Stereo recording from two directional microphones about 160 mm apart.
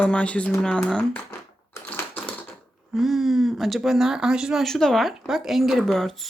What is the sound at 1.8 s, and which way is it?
Typewriter, 10° left (ahead or behind).